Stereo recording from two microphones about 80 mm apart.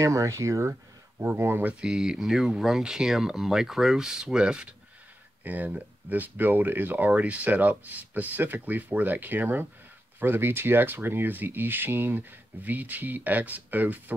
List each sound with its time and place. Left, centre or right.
0.0 s speech: right
1.2 s speech: right
1.7 s speech: centre